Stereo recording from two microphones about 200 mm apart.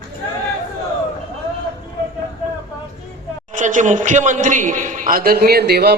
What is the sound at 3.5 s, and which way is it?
A man's voice, 40° right (ahead or behind).